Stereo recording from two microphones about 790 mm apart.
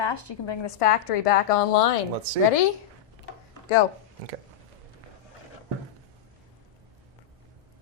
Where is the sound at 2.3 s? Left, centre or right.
Right.